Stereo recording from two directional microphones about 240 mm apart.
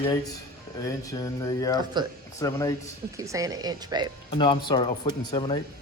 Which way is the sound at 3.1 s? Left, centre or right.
Centre.